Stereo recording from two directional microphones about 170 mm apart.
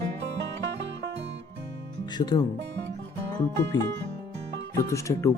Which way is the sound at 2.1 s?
25° left (ahead or behind).